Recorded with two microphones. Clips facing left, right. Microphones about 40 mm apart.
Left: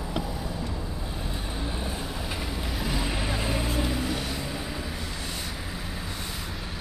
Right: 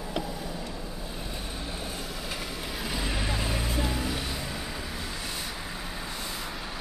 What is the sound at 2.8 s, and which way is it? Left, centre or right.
Vehicle, centre.